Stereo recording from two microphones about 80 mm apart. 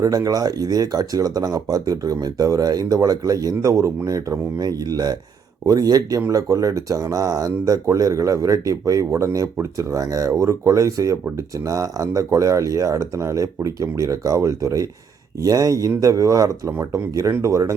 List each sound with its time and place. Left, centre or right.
0.0 s speech: right